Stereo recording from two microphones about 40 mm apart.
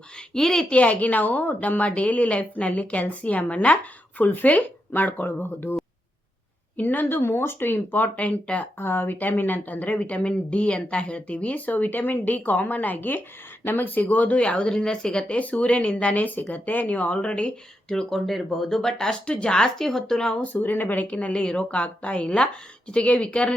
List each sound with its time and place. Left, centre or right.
0.3 s speech: centre
0.7 s a woman's voice: left
6.7 s speech: left
7.2 s speech: left
8.1 s a woman's voice: left
8.8 s speech: left
9.6 s a woman's voice: left
15.4 s a woman's voice: left
17.8 s speech: centre
19.2 s a woman's voice: left
19.8 s speech: centre
20.4 s speech: left
21.4 s a woman's voice: left